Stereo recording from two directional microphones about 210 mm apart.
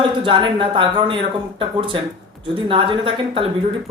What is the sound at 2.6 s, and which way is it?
Speech, 25° right (ahead or behind).